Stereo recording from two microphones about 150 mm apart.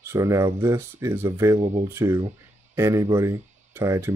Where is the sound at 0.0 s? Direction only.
20° right (ahead or behind).